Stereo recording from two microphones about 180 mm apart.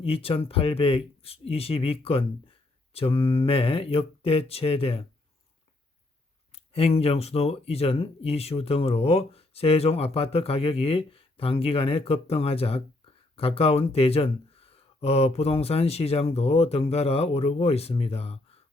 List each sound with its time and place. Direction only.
0.0 s speech: 30° left (ahead or behind)
6.5 s speech: 35° left (ahead or behind)